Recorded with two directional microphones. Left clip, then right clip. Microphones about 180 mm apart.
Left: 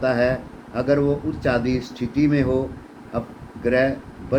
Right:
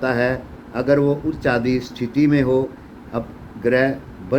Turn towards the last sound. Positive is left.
turn(degrees=-60)  # may be behind; listen again after turning